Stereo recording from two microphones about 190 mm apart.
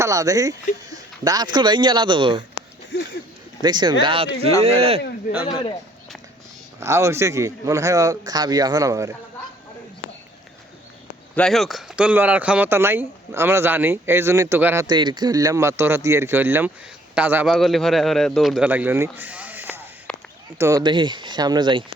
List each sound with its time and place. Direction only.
0.0 s speech: 20° right (ahead or behind)
2.9 s speech: 70° left (ahead or behind)
3.6 s speech: 25° right (ahead or behind)
5.3 s speech: 55° left (ahead or behind)
6.7 s speech: 15° right (ahead or behind)
11.3 s speech: centre (ahead or behind)
20.1 s a sound: 5° left (ahead or behind)
20.6 s speech: 20° right (ahead or behind)